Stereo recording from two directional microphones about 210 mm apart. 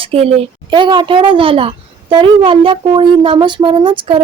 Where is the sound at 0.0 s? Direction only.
25° right (ahead or behind).